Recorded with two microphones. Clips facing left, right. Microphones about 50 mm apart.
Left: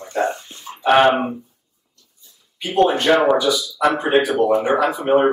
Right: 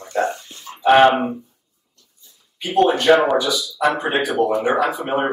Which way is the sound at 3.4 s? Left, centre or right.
Centre.